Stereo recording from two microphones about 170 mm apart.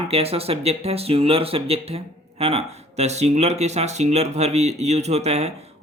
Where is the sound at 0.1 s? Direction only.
35° right (ahead or behind).